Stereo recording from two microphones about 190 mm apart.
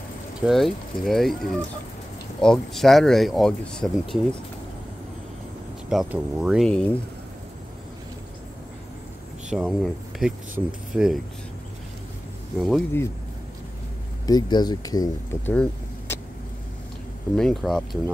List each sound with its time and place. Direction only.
0.4 s speech: centre (ahead or behind)
5.9 s speech: 5° right (ahead or behind)
9.5 s speech: 5° right (ahead or behind)
12.5 s speech: centre (ahead or behind)
14.2 s speech: 20° left (ahead or behind)
15.5 s vehicle: 5° left (ahead or behind)
17.4 s speech: centre (ahead or behind)